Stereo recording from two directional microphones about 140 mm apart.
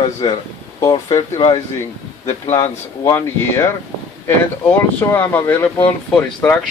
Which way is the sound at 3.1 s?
15° left (ahead or behind).